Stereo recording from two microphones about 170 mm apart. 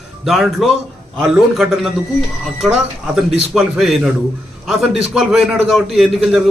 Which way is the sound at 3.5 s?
Centre (ahead or behind).